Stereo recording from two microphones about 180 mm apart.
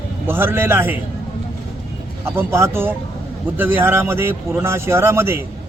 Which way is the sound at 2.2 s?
15° right (ahead or behind).